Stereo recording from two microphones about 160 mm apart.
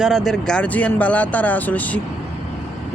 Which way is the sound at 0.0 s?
Centre (ahead or behind).